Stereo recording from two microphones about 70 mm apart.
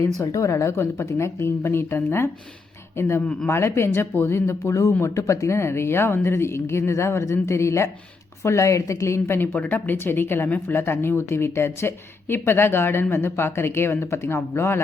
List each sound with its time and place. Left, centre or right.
0.2 s a woman's voice: left